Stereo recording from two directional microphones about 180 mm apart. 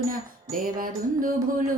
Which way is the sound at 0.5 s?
50° right (ahead or behind).